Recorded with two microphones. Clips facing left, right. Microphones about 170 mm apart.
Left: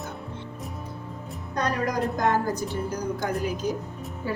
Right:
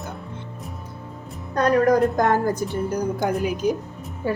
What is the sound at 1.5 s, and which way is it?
A woman's voice, 55° right (ahead or behind).